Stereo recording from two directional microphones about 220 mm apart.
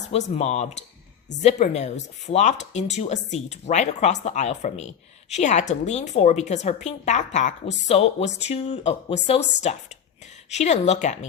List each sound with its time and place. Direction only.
0.1 s a woman's voice: 30° left (ahead or behind)